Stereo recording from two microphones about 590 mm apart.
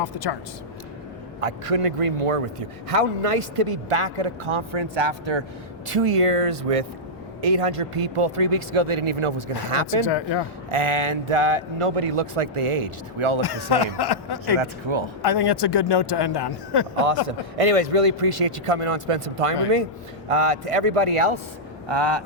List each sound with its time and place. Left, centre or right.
0.0 s speech: left
1.4 s a man's voice: right
5.9 s a man's voice: right
10.0 s speech: left
10.7 s a man's voice: right
13.4 s speech: left
14.6 s speech: right
15.2 s speech: left
17.2 s a man's voice: right
21.8 s speech: right